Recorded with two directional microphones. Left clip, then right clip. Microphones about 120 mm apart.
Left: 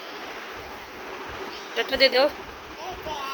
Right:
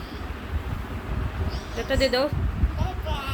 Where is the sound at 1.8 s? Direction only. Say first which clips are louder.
Left 3 dB; 5° right (ahead or behind).